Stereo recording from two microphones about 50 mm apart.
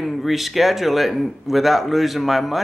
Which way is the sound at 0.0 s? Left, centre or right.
Centre.